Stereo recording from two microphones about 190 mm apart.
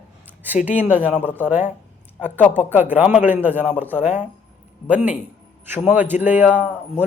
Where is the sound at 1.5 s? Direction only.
10° right (ahead or behind).